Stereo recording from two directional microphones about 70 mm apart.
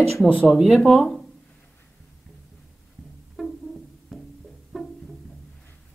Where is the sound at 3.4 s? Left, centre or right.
Centre.